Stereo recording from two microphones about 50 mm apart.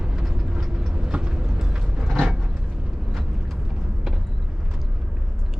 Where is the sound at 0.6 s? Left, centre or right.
Centre.